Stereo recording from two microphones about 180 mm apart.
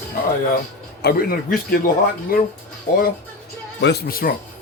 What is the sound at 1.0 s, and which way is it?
Speech, 55° left (ahead or behind).